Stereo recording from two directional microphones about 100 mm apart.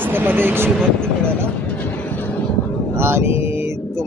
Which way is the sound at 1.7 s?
15° left (ahead or behind).